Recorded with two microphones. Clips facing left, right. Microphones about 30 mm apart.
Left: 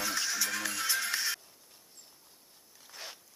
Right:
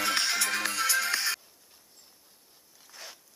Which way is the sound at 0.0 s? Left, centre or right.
Right.